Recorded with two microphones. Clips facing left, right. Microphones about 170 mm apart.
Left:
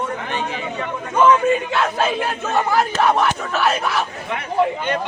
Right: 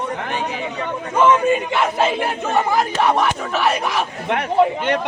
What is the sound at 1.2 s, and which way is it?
Crowd, 10° right (ahead or behind).